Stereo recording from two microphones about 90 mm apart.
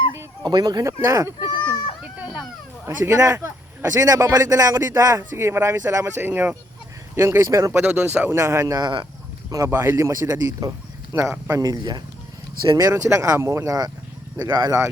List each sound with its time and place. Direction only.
0.4 s speech: 50° right (ahead or behind)
1.4 s baby cry: 55° left (ahead or behind)
2.1 s a sound: 15° right (ahead or behind)
2.8 s speech: 35° right (ahead or behind)
7.9 s speech: 20° right (ahead or behind)
8.3 s speech: 35° right (ahead or behind)
9.6 s speech: 25° right (ahead or behind)
10.0 s speech: 35° right (ahead or behind)
11.1 s speech: 30° right (ahead or behind)
11.7 s speech: 50° right (ahead or behind)
12.6 s speech: 40° right (ahead or behind)